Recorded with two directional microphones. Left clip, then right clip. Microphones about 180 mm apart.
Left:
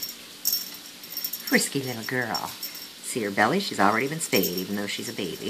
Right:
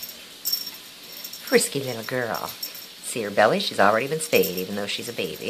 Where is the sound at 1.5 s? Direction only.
20° right (ahead or behind).